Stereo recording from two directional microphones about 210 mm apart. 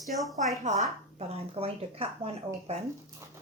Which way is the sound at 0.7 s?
30° right (ahead or behind).